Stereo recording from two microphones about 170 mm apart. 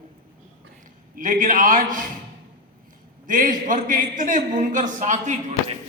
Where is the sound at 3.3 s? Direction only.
50° right (ahead or behind).